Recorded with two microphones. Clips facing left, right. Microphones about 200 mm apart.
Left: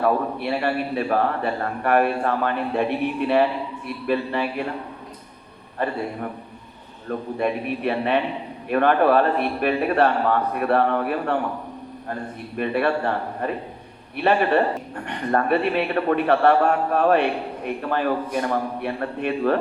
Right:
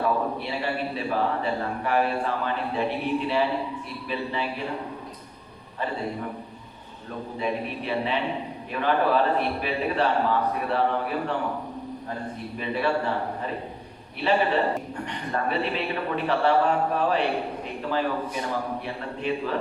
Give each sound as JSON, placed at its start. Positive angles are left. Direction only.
{"t": 0.0, "sound": "a man's voice", "side_deg": 55}
{"t": 5.8, "sound": "a man's voice", "side_deg": 60}
{"t": 7.3, "sound": "a man's voice", "side_deg": 60}
{"t": 12.5, "sound": "a man's voice", "side_deg": 60}